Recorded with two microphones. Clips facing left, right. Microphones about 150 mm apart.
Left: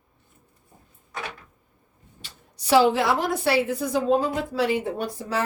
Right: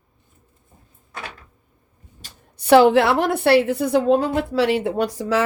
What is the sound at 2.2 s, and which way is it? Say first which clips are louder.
A woman's voice: right 8 dB; 55° right (ahead or behind).